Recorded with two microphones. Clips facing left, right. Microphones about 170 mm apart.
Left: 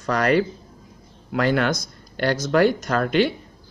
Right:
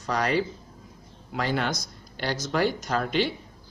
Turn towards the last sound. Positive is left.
turn(degrees=60)  # may be behind; listen again after turning